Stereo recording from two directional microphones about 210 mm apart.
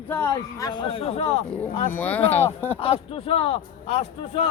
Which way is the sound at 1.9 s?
10° left (ahead or behind).